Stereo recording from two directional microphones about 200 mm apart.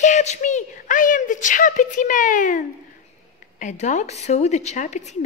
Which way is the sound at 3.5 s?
40° left (ahead or behind).